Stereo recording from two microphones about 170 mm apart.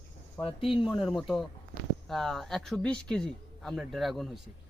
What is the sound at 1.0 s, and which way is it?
Speech, centre (ahead or behind).